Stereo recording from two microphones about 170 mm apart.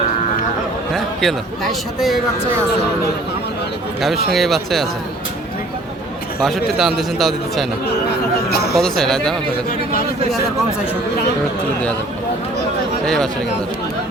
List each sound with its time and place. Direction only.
0.9 s a man's voice: centre (ahead or behind)
4.3 s a man's voice: centre (ahead or behind)
6.4 s a man's voice: centre (ahead or behind)
8.4 s speech: 65° left (ahead or behind)
8.7 s a man's voice: centre (ahead or behind)
13.1 s a man's voice: 5° left (ahead or behind)